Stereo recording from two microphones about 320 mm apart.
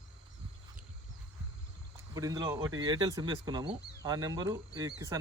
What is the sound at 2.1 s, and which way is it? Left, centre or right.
Speech, centre.